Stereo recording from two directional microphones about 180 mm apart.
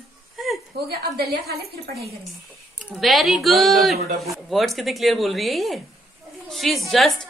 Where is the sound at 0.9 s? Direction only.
60° right (ahead or behind).